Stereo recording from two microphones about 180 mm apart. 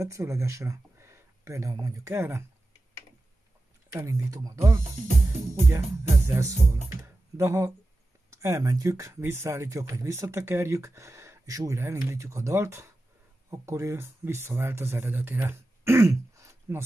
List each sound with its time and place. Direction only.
0.0 s speech: 15° right (ahead or behind)
3.9 s speech: 15° right (ahead or behind)